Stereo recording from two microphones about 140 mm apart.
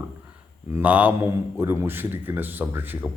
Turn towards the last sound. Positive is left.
turn(degrees=-15)  # may be behind; listen again after turning